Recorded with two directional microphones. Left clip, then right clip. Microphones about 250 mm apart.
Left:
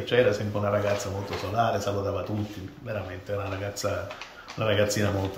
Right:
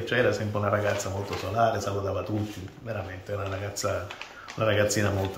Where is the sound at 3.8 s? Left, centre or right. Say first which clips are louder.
Right 1 dB; centre.